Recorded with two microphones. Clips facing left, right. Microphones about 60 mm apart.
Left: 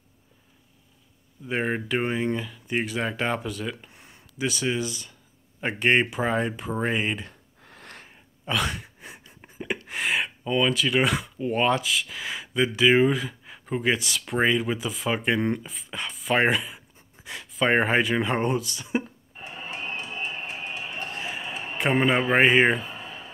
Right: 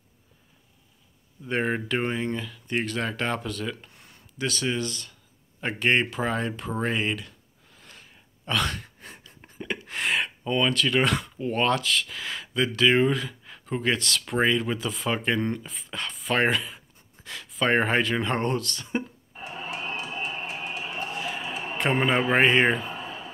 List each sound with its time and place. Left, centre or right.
1.4 s speech: centre
3.9 s speech: centre
7.6 s a sound: left
8.5 s a sound: centre
9.8 s speech: centre
19.6 s music: left
21.7 s a man's voice: centre